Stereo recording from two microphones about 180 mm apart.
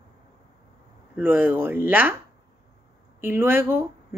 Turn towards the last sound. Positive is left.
turn(degrees=-10)  # may be behind; listen again after turning